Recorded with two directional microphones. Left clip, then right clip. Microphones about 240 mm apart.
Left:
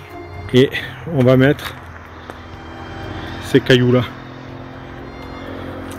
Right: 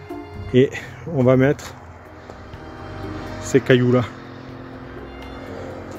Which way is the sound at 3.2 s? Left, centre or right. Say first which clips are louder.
Left 3 dB; left.